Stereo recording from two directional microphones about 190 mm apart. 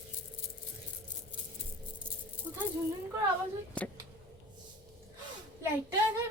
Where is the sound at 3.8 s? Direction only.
5° left (ahead or behind).